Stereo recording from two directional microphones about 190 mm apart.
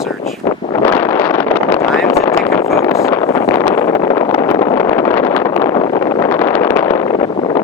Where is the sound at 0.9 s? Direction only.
10° left (ahead or behind).